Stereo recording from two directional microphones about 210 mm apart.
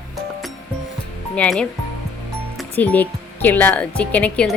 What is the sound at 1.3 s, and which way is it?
Speech, 5° left (ahead or behind).